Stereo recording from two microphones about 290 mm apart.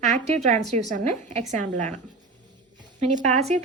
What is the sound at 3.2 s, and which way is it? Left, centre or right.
Speech, right.